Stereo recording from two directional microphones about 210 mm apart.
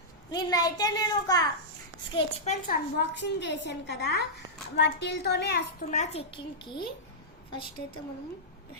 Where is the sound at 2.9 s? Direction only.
55° left (ahead or behind).